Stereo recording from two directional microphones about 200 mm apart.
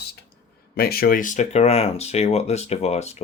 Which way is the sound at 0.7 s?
50° left (ahead or behind).